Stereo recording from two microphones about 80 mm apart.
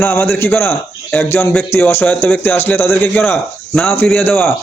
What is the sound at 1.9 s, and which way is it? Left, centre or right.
A man's voice, left.